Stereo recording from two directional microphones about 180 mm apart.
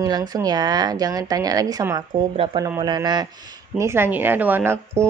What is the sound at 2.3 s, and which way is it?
Speech, 30° right (ahead or behind).